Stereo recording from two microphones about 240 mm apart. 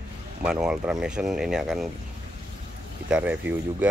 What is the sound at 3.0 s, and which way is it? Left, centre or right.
Speech, centre.